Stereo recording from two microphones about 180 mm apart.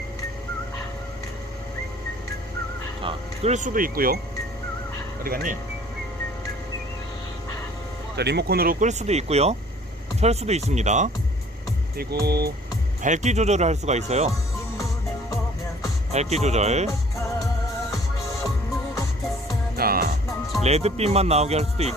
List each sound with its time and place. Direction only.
3.0 s music: 30° right (ahead or behind)
3.5 s speech: 45° right (ahead or behind)
5.2 s speech: 50° right (ahead or behind)
8.1 s speech: 65° right (ahead or behind); by 11.1 s 40° right (ahead or behind)
11.9 s speech: 60° right (ahead or behind)
13.0 s speech: 40° right (ahead or behind)
16.1 s speech: 40° right (ahead or behind)
19.7 s music: 55° right (ahead or behind)
20.7 s speech: 35° right (ahead or behind)